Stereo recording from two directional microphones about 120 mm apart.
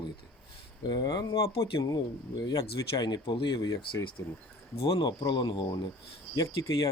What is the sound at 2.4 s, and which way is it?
Speech, 35° left (ahead or behind).